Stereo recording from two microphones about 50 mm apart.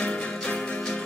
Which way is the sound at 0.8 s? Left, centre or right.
Centre.